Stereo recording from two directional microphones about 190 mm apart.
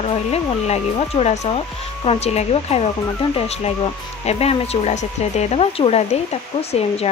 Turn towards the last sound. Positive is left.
turn(degrees=30)  # may be behind; listen again after turning